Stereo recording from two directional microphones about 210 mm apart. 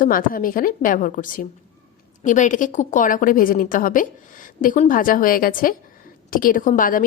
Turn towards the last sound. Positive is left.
turn(degrees=40)  # may be behind; listen again after turning